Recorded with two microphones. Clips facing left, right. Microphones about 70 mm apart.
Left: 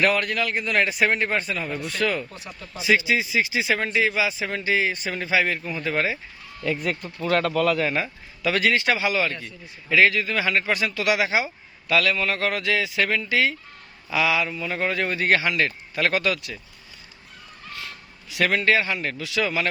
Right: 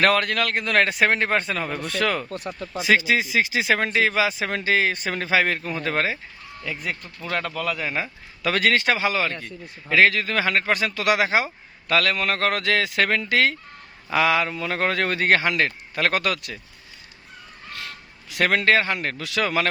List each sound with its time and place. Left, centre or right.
0.0 s a man's voice: right
2.0 s speech: right
2.5 s a man's voice: right
3.8 s a man's voice: right
6.7 s speech: centre
7.9 s speech: right
8.4 s a man's voice: right
14.5 s a man's voice: right
14.8 s a man's voice: right
18.6 s a man's voice: right